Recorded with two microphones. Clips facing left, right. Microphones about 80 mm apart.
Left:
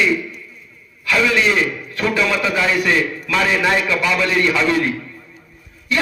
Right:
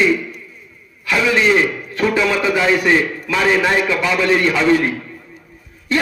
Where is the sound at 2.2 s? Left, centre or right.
Right.